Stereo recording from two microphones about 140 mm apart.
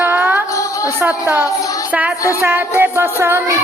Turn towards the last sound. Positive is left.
turn(degrees=-20)  # may be behind; listen again after turning